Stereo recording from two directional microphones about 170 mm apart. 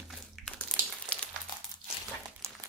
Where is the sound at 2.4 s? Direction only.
15° right (ahead or behind).